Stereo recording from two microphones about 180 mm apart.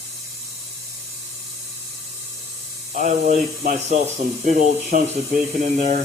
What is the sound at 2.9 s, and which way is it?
Speech, 45° right (ahead or behind).